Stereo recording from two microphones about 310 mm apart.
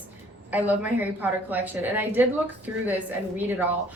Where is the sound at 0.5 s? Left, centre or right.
Centre.